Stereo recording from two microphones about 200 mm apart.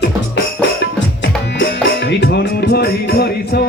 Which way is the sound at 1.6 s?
60° left (ahead or behind).